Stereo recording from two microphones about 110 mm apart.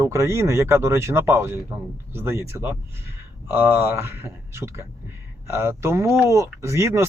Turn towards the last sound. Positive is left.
turn(degrees=-25)  # may be behind; listen again after turning